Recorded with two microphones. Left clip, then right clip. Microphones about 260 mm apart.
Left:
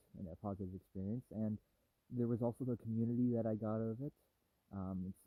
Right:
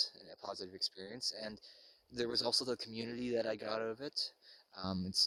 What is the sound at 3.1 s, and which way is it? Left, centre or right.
Speech, right.